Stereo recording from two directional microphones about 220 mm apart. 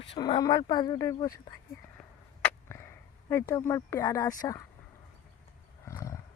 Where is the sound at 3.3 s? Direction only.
15° left (ahead or behind).